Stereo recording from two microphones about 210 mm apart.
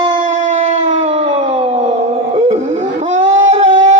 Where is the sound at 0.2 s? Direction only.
35° right (ahead or behind).